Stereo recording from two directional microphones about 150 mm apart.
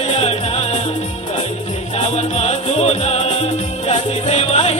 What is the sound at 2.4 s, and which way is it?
Music, 45° left (ahead or behind).